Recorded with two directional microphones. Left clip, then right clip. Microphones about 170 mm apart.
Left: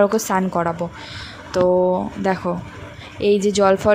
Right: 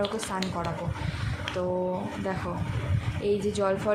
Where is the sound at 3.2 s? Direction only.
50° left (ahead or behind).